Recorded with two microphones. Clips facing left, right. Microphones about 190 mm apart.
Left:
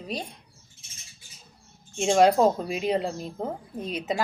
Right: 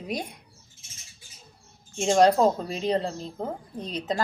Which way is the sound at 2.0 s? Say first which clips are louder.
Even; 5° left (ahead or behind).